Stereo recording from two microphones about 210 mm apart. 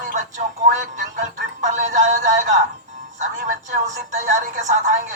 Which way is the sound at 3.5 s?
35° right (ahead or behind).